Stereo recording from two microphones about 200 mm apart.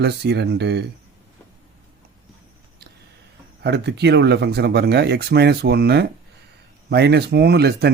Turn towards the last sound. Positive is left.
turn(degrees=-55)  # may be behind; listen again after turning